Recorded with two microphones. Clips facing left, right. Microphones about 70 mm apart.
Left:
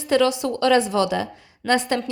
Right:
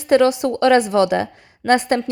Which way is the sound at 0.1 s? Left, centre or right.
Right.